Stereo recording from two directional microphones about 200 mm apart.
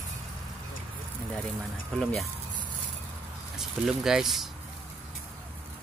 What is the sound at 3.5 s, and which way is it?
Speech, centre (ahead or behind).